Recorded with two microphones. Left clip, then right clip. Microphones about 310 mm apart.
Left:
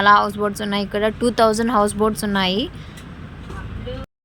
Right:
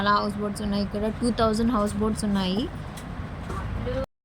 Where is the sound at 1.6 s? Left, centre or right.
Left.